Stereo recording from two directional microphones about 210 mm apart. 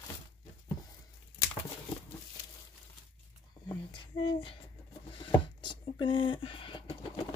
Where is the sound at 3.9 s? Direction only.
25° left (ahead or behind).